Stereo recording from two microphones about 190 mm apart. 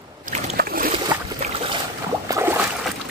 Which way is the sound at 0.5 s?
50° right (ahead or behind).